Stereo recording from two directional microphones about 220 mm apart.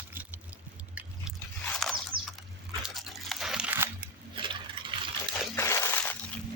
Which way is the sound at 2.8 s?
Centre (ahead or behind).